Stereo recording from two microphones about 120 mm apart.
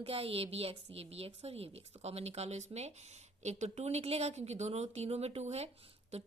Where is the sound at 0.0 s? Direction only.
55° right (ahead or behind).